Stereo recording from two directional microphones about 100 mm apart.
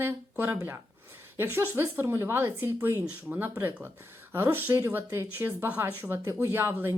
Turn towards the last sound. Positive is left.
turn(degrees=-25)  # may be behind; listen again after turning